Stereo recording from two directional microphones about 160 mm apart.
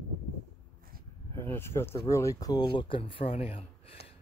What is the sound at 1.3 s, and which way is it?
Speech, 15° left (ahead or behind).